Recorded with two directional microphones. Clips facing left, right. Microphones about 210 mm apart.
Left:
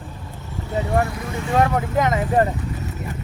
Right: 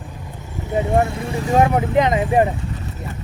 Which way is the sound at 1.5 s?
20° right (ahead or behind).